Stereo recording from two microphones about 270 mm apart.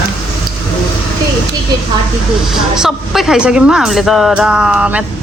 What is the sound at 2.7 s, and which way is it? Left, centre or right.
Speech, centre.